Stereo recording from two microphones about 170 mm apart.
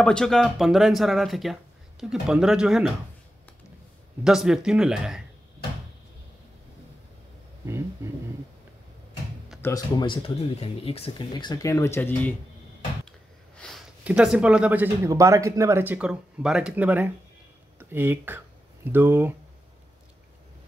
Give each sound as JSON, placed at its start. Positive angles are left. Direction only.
{"t": 0.0, "sound": "speech", "side_deg": 5}
{"t": 4.2, "sound": "speech", "side_deg": -5}
{"t": 7.6, "sound": "speech", "side_deg": -15}
{"t": 9.6, "sound": "speech", "side_deg": 20}
{"t": 13.6, "sound": "speech", "side_deg": 0}